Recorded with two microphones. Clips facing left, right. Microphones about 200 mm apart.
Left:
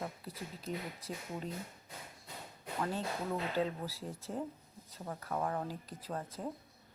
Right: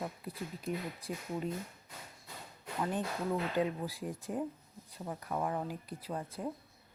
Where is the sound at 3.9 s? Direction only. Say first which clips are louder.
Right 3 dB; 15° right (ahead or behind).